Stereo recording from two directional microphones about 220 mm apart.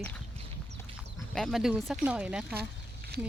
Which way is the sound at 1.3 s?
Centre (ahead or behind).